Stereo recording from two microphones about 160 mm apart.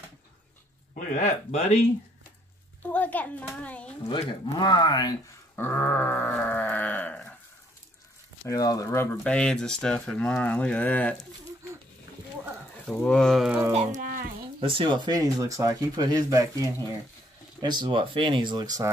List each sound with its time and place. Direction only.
0.9 s speech: 50° left (ahead or behind)
2.8 s a child's voice: 10° left (ahead or behind)
4.1 s speech: 30° left (ahead or behind)
5.6 s sheep: 15° left (ahead or behind)
8.5 s speech: 20° left (ahead or behind)
9.1 s speech: 5° left (ahead or behind)
12.8 s speech: 5° left (ahead or behind)
13.7 s speech: 55° right (ahead or behind)
14.6 s speech: 35° right (ahead or behind)